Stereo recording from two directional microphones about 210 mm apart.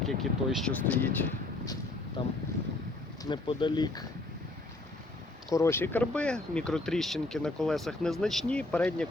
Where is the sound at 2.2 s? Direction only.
25° left (ahead or behind).